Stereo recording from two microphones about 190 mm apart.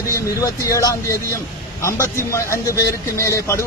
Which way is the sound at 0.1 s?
15° left (ahead or behind).